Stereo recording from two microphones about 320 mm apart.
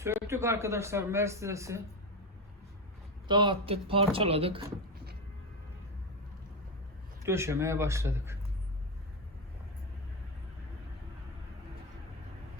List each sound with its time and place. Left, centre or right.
0.0 s speech: centre
3.2 s speech: centre
7.3 s speech: centre